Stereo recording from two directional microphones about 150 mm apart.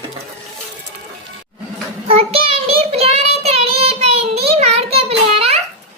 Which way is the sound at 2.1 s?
40° right (ahead or behind).